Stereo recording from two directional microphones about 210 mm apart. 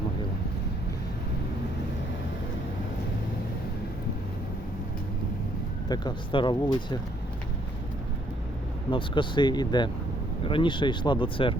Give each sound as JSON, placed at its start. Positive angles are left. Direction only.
{"t": 5.9, "sound": "speech", "side_deg": 20}
{"t": 8.9, "sound": "speech", "side_deg": 25}